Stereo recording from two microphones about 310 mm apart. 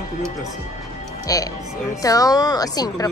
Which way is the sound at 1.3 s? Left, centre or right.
Centre.